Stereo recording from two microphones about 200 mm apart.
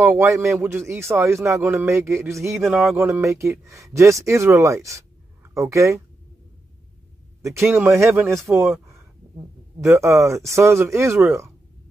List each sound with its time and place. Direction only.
0.0 s speech: 15° right (ahead or behind)
2.6 s music: centre (ahead or behind)
3.0 s speech: 15° right (ahead or behind)
7.6 s speech: 10° right (ahead or behind)
9.8 s speech: 15° right (ahead or behind)